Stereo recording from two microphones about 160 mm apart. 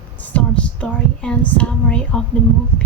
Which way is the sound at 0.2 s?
10° left (ahead or behind).